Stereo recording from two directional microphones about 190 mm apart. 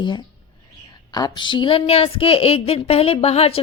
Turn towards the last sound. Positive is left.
turn(degrees=30)  # may be behind; listen again after turning